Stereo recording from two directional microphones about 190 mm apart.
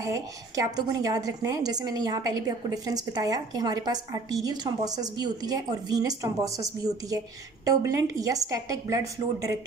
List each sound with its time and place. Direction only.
0.0 s a woman's voice: 15° right (ahead or behind)